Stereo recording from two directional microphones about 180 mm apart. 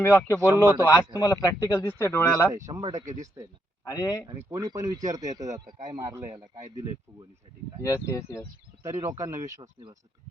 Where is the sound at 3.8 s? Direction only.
20° left (ahead or behind).